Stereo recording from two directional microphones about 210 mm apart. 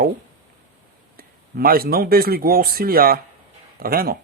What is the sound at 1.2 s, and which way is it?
Speech, 45° right (ahead or behind).